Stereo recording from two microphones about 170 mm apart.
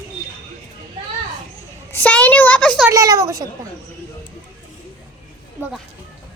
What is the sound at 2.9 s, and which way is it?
Speech, 20° right (ahead or behind).